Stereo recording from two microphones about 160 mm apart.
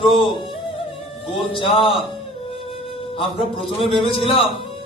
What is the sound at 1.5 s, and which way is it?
Speech, 35° left (ahead or behind).